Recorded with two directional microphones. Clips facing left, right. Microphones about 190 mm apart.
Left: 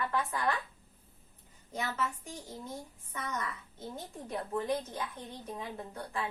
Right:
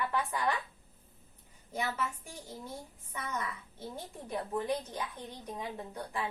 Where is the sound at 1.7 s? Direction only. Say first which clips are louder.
Right 1 dB; 10° right (ahead or behind).